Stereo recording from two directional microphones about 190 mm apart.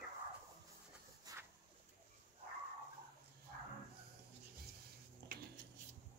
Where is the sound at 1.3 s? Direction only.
20° right (ahead or behind).